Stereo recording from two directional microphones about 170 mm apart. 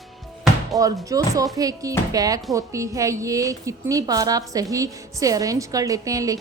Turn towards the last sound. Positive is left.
turn(degrees=-20)  # may be behind; listen again after turning